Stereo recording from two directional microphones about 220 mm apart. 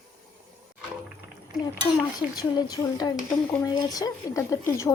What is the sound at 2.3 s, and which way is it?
Speech, 15° left (ahead or behind).